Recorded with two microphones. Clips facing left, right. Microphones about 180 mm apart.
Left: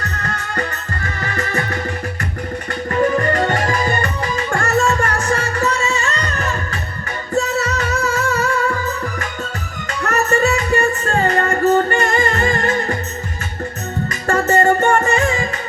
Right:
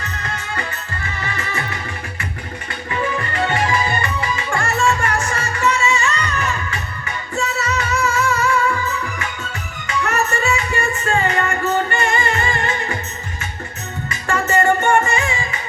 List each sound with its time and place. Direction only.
0.0 s music: 40° left (ahead or behind)
2.9 s music: 45° left (ahead or behind)
9.8 s music: 40° left (ahead or behind)
14.3 s music: 40° left (ahead or behind)